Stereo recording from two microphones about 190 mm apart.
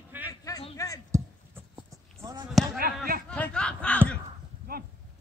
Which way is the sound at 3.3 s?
5° left (ahead or behind).